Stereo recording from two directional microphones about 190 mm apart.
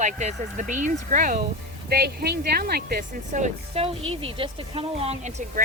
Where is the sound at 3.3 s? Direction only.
40° right (ahead or behind).